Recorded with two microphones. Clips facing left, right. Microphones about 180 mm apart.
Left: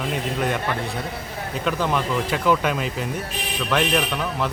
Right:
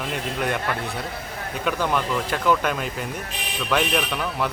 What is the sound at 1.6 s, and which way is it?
Speech, centre (ahead or behind).